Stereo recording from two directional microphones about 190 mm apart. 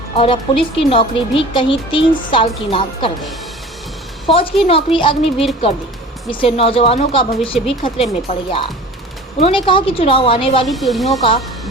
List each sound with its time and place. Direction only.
0.2 s speech: 30° left (ahead or behind)
4.6 s speech: 30° left (ahead or behind)
10.7 s speech: centre (ahead or behind)